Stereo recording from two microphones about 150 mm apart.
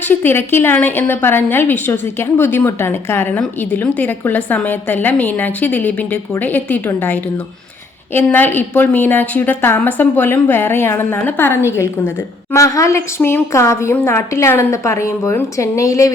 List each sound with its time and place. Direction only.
0.0 s a woman's voice: 15° left (ahead or behind)